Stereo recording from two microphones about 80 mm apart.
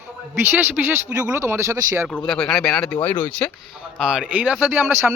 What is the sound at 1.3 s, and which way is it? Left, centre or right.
Speech, right.